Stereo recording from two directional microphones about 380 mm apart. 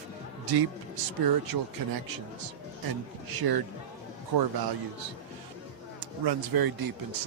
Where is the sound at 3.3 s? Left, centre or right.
Right.